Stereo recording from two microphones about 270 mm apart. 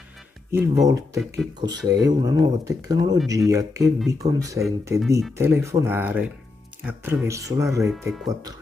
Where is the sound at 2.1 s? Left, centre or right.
Centre.